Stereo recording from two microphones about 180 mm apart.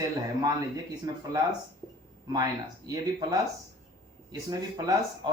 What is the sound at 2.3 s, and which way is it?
Speech, 20° right (ahead or behind).